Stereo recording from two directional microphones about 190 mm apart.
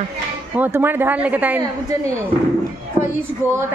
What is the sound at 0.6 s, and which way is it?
Speech, 10° right (ahead or behind).